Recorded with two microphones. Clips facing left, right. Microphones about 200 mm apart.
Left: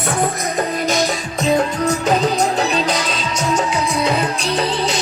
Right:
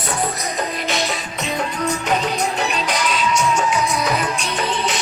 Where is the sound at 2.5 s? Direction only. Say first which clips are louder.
Left 4 dB; 35° left (ahead or behind).